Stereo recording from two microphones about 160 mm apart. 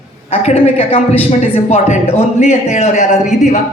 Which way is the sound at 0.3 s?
40° left (ahead or behind).